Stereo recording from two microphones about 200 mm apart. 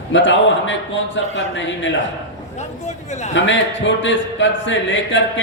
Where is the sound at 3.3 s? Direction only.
65° left (ahead or behind).